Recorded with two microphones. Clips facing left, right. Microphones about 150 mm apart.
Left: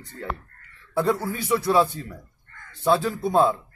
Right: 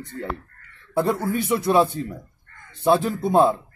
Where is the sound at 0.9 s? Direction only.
20° right (ahead or behind).